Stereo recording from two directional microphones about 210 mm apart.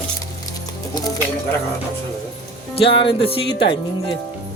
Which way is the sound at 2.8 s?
25° left (ahead or behind).